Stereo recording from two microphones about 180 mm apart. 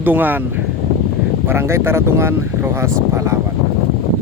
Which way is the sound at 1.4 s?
15° right (ahead or behind).